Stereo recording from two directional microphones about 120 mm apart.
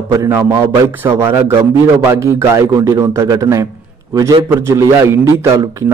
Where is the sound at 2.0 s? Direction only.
20° right (ahead or behind).